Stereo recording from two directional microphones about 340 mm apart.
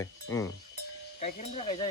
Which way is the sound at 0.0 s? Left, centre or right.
Centre.